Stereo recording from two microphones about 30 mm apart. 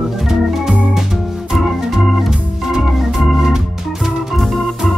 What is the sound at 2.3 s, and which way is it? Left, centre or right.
Organ, centre.